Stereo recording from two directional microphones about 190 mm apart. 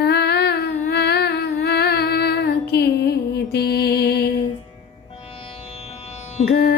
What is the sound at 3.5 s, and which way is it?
Music, 55° left (ahead or behind).